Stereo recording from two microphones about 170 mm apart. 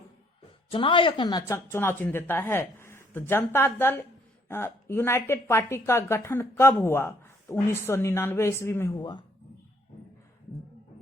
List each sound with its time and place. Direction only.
0.7 s a woman's voice: 30° left (ahead or behind)